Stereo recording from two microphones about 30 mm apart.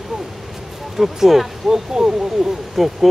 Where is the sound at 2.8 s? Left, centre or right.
Centre.